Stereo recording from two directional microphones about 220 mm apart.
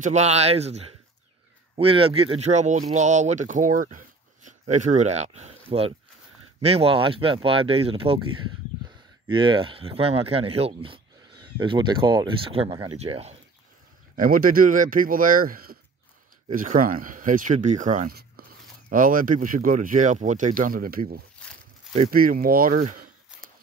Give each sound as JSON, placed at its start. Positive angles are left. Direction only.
{"t": 0.0, "sound": "speech", "side_deg": -30}
{"t": 9.3, "sound": "speech", "side_deg": -20}
{"t": 14.1, "sound": "speech", "side_deg": -40}